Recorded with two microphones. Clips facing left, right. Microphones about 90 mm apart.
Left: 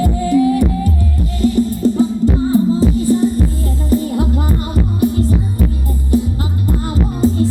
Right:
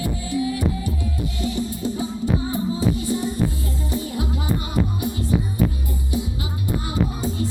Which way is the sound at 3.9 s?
50° left (ahead or behind).